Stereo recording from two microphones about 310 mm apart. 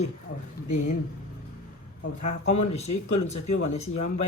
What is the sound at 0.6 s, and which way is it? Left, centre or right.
Speech, left.